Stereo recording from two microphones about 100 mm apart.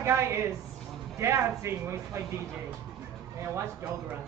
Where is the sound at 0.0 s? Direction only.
30° right (ahead or behind).